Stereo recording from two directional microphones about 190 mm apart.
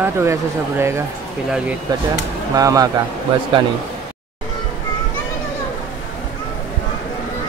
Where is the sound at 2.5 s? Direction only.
20° right (ahead or behind).